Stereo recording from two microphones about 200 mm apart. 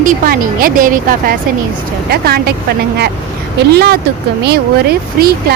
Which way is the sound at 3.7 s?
55° right (ahead or behind).